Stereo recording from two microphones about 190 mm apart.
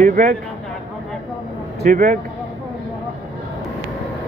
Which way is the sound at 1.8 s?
45° right (ahead or behind).